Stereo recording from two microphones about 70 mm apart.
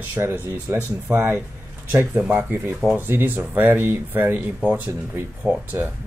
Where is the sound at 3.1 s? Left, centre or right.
Right.